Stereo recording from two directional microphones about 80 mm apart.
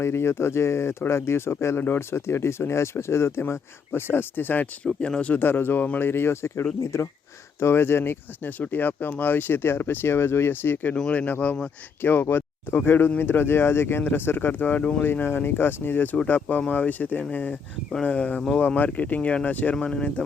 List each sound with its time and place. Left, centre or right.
0.0 s speech: left
4.9 s speech: centre; by 10.9 s left
10.9 s speech: centre